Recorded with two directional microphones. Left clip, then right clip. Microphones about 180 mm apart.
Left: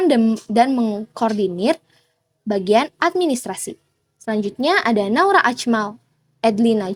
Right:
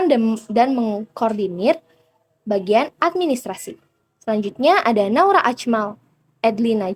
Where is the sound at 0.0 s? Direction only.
35° left (ahead or behind).